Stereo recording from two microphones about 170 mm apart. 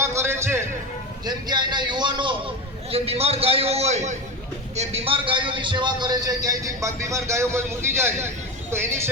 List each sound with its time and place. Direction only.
0.0 s music: 15° right (ahead or behind)
1.2 s a man's voice: 25° right (ahead or behind)